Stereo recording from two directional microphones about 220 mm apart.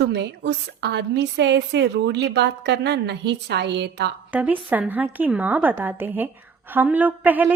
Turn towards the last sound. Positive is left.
turn(degrees=-5)  # may be behind; listen again after turning